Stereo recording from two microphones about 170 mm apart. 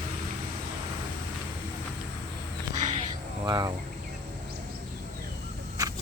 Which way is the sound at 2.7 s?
45° right (ahead or behind).